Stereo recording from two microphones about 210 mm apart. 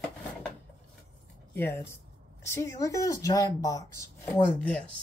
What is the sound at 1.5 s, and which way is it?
Speech, 10° left (ahead or behind).